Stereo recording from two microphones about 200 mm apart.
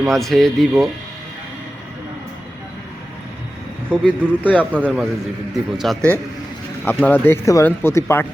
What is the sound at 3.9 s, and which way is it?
Speech, 5° left (ahead or behind).